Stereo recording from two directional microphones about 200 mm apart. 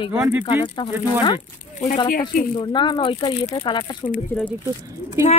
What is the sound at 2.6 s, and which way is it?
Speech, 25° left (ahead or behind).